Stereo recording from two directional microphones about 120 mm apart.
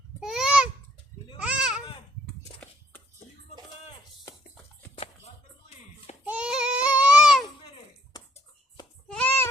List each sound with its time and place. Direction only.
0.2 s a sound: 5° right (ahead or behind)
4.9 s music: 60° left (ahead or behind)
6.2 s babbling: 10° right (ahead or behind)
9.0 s sheep: 10° left (ahead or behind)